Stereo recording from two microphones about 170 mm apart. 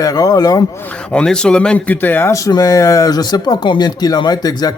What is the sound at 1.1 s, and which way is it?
A man's voice, 5° left (ahead or behind).